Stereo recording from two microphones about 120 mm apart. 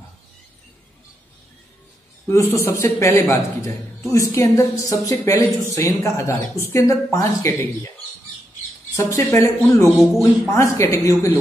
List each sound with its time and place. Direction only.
2.2 s a woman's voice: 25° left (ahead or behind)
8.9 s a woman's voice: 25° left (ahead or behind)
9.9 s speech: centre (ahead or behind)
10.5 s a woman's voice: 25° left (ahead or behind)